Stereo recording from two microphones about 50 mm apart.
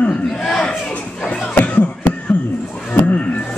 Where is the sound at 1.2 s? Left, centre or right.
Centre.